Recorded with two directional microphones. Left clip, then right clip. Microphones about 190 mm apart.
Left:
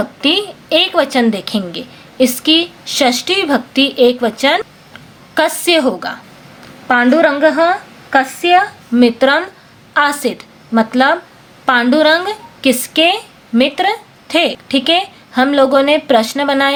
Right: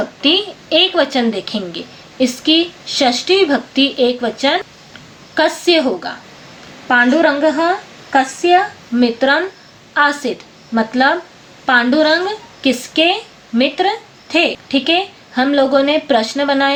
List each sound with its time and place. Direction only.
0.2 s a woman's voice: 40° left (ahead or behind)